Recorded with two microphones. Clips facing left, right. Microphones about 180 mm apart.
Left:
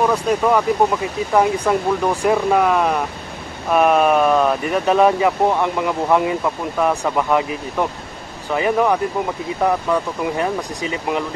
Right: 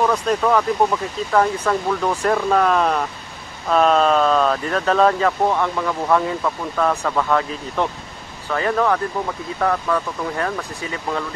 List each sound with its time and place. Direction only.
0.0 s speech: 10° left (ahead or behind)